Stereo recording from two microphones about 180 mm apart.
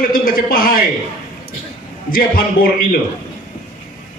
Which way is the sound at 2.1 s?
55° left (ahead or behind).